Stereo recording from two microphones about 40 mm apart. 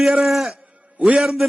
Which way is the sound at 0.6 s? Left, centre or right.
Right.